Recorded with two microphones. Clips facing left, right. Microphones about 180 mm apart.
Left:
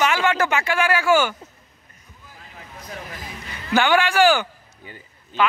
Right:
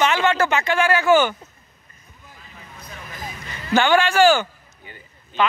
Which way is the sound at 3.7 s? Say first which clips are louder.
Right 1 dB; 10° left (ahead or behind).